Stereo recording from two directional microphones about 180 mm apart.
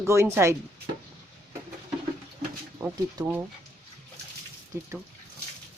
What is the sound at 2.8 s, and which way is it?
Speech, 10° right (ahead or behind).